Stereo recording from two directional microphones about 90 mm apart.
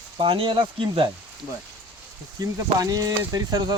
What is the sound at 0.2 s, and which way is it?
Speech, 80° right.